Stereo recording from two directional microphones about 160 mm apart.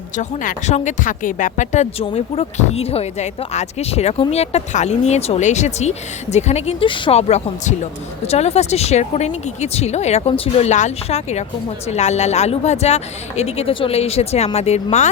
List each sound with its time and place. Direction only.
0.2 s speech: 45° left (ahead or behind)